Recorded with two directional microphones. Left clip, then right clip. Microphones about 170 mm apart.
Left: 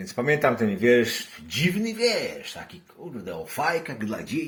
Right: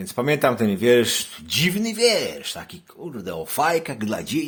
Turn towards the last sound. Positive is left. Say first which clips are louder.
# right 5 dB
turn(degrees=-45)  # may be behind; listen again after turning